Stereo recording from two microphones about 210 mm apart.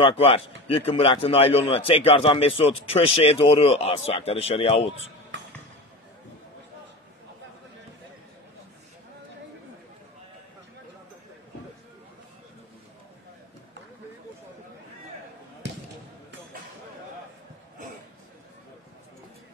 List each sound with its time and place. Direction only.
0.0 s a man's voice: 25° left (ahead or behind)